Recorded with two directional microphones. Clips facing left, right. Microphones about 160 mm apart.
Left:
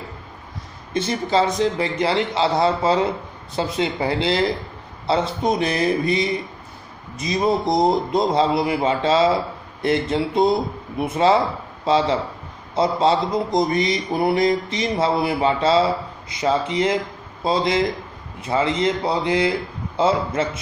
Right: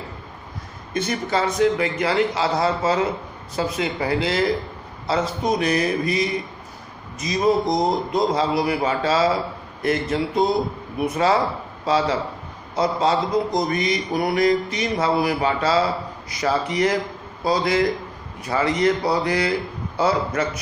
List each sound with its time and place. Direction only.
0.9 s speech: 30° left (ahead or behind)